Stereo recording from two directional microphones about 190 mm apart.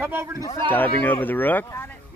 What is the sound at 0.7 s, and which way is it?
Speech, 10° left (ahead or behind).